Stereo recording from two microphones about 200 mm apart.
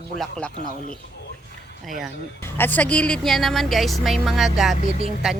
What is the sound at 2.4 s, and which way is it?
Speech, 10° left (ahead or behind).